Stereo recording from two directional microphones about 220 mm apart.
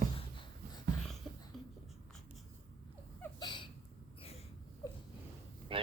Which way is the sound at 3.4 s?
20° left (ahead or behind).